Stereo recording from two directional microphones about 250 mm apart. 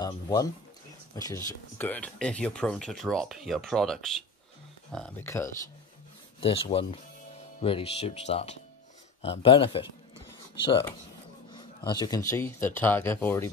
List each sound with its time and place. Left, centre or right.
0.0 s speech: centre
6.4 s speech: left